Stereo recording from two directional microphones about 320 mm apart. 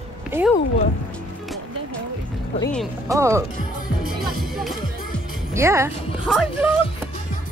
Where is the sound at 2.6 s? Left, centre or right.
Centre.